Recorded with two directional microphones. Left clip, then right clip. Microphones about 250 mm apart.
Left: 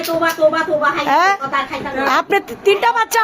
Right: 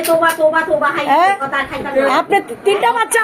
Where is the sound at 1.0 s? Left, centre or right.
Left.